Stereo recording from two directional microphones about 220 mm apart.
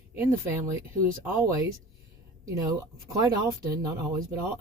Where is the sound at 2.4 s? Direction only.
15° right (ahead or behind).